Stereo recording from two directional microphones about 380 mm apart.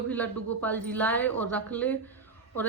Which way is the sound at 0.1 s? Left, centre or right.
Centre.